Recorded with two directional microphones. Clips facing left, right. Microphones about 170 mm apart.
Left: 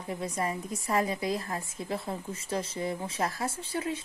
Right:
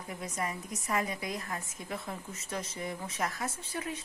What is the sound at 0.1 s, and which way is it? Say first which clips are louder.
Speech: left 5 dB; 30° left (ahead or behind).